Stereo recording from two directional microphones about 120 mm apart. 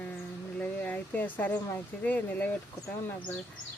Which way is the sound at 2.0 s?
15° left (ahead or behind).